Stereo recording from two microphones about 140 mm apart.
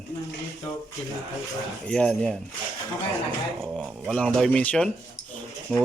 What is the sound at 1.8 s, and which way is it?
Speech, 5° left (ahead or behind).